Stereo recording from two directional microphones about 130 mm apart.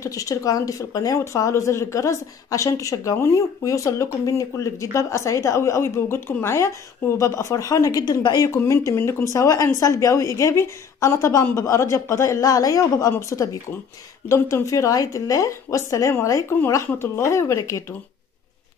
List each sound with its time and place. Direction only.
0.0 s a woman's voice: 25° left (ahead or behind)